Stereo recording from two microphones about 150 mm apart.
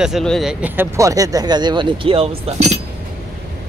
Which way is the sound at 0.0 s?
Centre (ahead or behind).